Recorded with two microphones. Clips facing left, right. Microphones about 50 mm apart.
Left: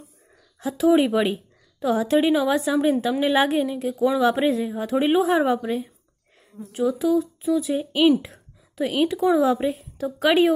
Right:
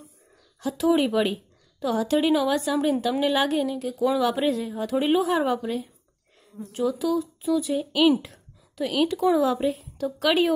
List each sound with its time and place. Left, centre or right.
0.6 s speech: centre
3.9 s speech: centre
4.2 s speech: centre
6.9 s speech: centre
7.2 s a woman's voice: centre